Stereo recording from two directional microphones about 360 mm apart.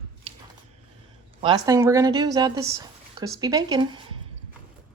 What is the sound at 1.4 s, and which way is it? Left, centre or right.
Speech, centre.